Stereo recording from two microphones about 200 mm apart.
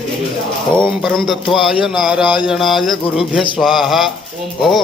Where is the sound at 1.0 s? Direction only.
Centre (ahead or behind).